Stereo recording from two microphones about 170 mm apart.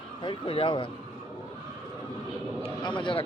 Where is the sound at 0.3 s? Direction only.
30° left (ahead or behind).